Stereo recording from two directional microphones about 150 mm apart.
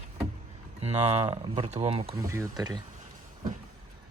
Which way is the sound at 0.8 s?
45° right (ahead or behind).